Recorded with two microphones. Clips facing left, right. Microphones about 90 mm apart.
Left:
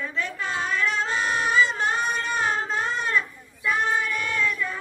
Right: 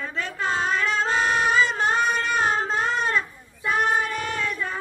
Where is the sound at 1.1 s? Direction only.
60° right (ahead or behind).